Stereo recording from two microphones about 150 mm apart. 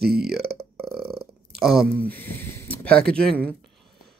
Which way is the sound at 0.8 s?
Centre (ahead or behind).